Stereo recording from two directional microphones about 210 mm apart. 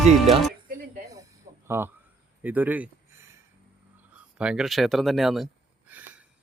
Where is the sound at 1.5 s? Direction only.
30° right (ahead or behind).